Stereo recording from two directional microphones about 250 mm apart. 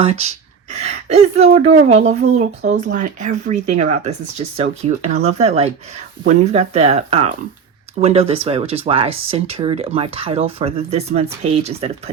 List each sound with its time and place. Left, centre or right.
0.0 s speech: right